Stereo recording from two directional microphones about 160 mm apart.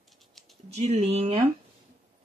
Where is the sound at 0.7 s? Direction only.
40° right (ahead or behind).